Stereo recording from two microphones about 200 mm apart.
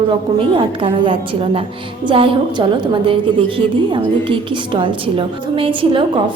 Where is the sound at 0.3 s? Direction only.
25° right (ahead or behind).